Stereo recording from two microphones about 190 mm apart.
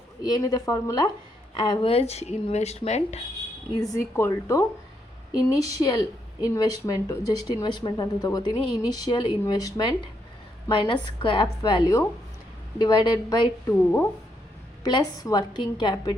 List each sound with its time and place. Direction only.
0.2 s a woman's voice: 20° left (ahead or behind); by 3.2 s 35° left (ahead or behind)
4.1 s a woman's voice: 15° left (ahead or behind)
14.8 s a woman's voice: 20° left (ahead or behind)